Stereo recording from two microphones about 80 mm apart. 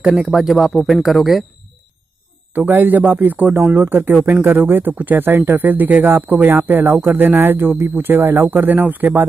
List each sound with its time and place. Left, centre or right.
0.0 s speech: centre
2.5 s speech: right